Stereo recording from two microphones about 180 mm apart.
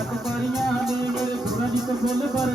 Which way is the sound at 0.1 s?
Centre (ahead or behind).